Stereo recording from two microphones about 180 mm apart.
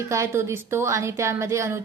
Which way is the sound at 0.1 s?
15° right (ahead or behind).